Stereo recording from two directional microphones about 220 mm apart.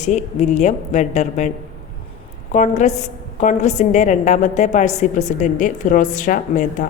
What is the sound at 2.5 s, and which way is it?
A woman's voice, 35° left (ahead or behind).